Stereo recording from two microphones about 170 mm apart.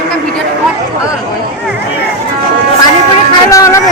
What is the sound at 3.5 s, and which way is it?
Speech, 20° left (ahead or behind).